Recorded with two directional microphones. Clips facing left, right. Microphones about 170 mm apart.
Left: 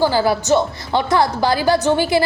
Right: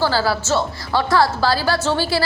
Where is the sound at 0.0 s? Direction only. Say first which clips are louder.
Left 3 dB; 20° left (ahead or behind).